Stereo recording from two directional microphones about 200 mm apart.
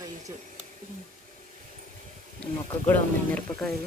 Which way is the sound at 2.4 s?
10° left (ahead or behind).